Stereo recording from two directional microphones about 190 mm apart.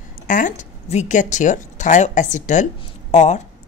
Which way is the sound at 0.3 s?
45° left (ahead or behind).